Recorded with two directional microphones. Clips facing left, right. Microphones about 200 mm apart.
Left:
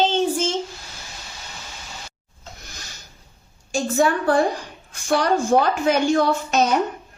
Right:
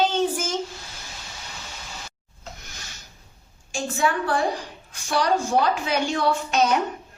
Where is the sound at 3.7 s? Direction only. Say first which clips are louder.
Left 5 dB; 40° left (ahead or behind).